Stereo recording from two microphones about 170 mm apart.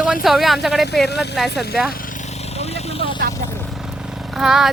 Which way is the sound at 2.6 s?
40° left (ahead or behind).